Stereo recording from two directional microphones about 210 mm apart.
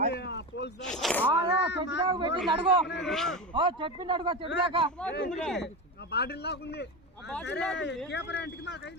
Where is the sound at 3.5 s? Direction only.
25° right (ahead or behind).